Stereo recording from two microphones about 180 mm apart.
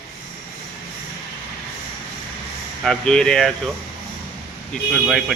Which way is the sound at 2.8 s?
5° left (ahead or behind).